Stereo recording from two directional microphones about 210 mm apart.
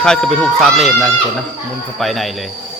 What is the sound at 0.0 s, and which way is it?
Speech, 5° left (ahead or behind).